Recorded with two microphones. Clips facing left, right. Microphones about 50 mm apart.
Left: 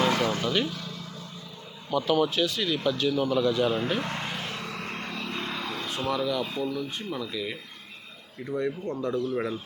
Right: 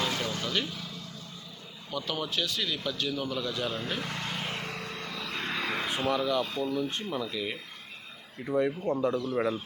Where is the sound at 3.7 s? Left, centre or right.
Centre.